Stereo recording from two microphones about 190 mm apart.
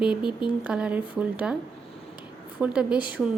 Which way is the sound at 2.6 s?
5° right (ahead or behind).